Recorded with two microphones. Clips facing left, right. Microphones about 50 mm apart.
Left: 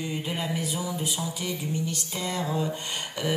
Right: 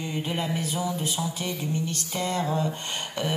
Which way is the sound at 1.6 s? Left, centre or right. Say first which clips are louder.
Right 1 dB; right.